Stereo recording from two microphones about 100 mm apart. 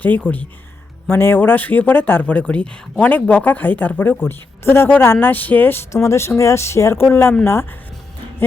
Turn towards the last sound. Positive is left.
turn(degrees=25)  # may be behind; listen again after turning